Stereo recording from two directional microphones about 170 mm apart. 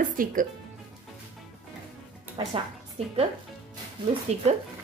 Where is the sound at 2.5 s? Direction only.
35° right (ahead or behind).